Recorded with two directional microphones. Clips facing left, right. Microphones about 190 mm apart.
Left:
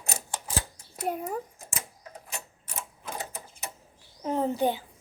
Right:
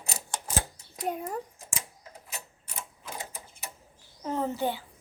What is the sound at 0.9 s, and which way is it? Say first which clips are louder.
Speech: left 1 dB; 5° left (ahead or behind).